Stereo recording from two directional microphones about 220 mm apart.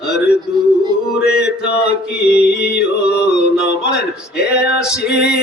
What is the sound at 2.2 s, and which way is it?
Music, 5° right (ahead or behind).